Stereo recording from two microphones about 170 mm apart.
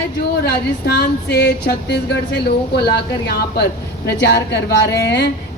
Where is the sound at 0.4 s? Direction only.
75° left (ahead or behind).